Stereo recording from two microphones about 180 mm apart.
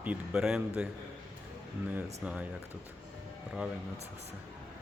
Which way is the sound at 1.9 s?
10° right (ahead or behind).